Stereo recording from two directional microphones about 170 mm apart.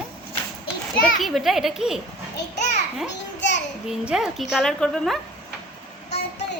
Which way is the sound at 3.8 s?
5° right (ahead or behind).